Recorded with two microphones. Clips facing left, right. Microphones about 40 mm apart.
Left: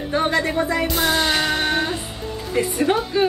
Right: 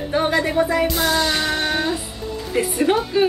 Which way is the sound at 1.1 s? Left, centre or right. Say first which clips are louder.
Even; left.